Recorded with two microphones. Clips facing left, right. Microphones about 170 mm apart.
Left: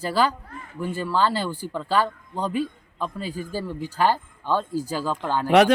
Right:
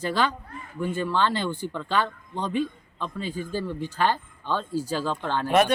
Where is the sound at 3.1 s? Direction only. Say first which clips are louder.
Even; 40° left (ahead or behind).